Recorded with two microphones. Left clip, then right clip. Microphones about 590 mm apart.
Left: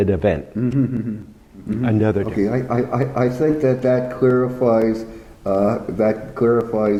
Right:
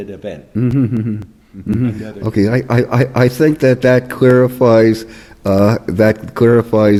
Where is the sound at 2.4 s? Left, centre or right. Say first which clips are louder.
Right 5 dB; right.